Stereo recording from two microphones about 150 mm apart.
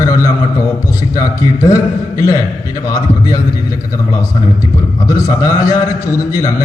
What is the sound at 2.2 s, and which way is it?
Mantra, 20° left (ahead or behind).